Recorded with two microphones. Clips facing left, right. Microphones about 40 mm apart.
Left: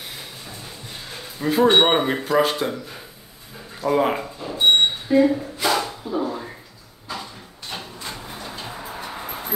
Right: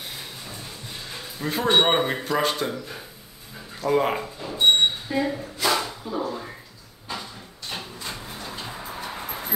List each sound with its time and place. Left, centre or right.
1.4 s speech: centre
1.7 s speech: centre
3.8 s a sound: centre
7.7 s vehicle: centre